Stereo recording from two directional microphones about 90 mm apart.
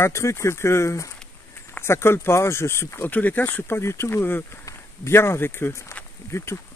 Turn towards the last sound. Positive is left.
turn(degrees=35)  # may be behind; listen again after turning